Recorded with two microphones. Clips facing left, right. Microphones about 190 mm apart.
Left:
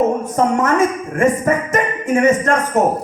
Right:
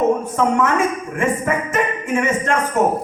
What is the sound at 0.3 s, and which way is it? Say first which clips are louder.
Speech: left 2 dB; 40° left (ahead or behind).